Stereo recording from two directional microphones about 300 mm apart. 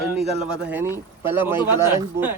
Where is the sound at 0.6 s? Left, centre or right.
Centre.